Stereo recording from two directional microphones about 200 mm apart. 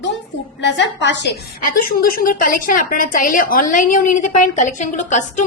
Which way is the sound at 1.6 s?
45° left (ahead or behind).